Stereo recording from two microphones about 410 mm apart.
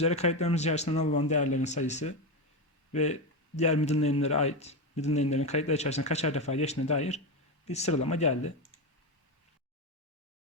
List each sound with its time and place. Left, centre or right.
0.0 s speech: centre